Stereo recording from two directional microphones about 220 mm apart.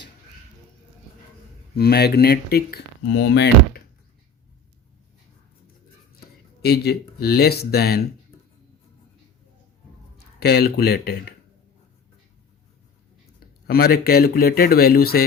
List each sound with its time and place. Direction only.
1.7 s speech: 45° left (ahead or behind)
6.6 s speech: 45° left (ahead or behind)
10.2 s speech: 45° left (ahead or behind)
13.7 s speech: 45° left (ahead or behind)